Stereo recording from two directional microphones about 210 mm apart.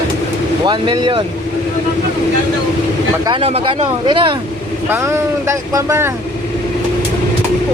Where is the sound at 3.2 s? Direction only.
25° right (ahead or behind).